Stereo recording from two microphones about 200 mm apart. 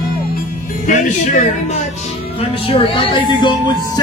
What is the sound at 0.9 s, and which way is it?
Speech, 40° left (ahead or behind).